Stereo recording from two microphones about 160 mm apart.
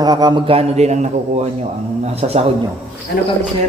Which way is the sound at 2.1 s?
40° right (ahead or behind).